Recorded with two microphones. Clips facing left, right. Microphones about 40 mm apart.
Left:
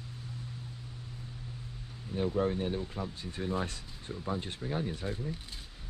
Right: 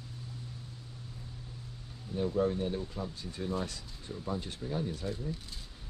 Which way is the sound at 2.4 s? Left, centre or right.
Left.